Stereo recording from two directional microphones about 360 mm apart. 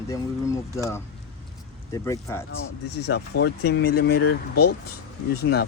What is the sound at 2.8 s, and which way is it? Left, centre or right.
Speech, left.